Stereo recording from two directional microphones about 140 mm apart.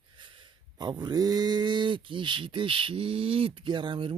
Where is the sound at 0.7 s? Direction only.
30° right (ahead or behind).